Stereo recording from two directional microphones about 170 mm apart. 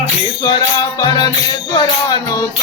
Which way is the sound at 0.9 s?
25° left (ahead or behind).